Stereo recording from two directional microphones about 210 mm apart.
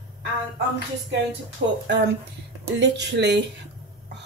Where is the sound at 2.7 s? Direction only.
55° right (ahead or behind).